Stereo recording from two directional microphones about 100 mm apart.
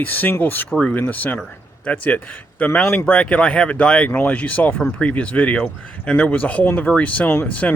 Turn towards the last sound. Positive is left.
turn(degrees=15)  # may be behind; listen again after turning